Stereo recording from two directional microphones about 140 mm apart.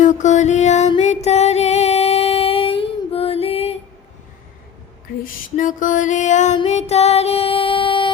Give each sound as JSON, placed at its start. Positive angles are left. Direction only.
{"t": 0.0, "sound": "music", "side_deg": 60}
{"t": 5.2, "sound": "music", "side_deg": 70}